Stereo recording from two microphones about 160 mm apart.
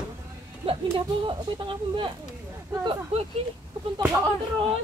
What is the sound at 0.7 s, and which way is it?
Speech, 35° right (ahead or behind).